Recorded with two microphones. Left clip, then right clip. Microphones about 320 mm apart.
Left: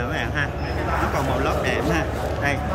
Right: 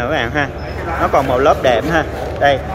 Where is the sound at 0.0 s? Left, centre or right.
Centre.